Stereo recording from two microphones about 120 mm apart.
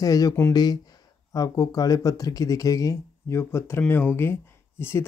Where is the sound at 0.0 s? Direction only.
30° left (ahead or behind).